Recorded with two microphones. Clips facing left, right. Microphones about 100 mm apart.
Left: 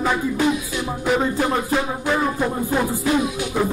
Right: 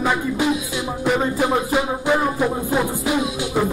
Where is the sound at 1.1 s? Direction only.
Centre (ahead or behind).